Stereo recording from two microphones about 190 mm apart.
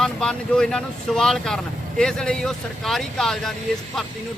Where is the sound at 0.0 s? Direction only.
5° left (ahead or behind).